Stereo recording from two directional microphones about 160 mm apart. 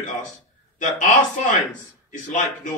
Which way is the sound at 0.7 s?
50° left (ahead or behind).